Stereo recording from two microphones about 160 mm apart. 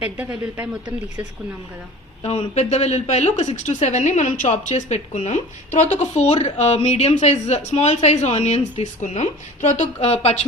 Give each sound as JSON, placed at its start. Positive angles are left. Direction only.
{"t": 0.0, "sound": "speech", "side_deg": -10}
{"t": 2.2, "sound": "a woman's voice", "side_deg": 40}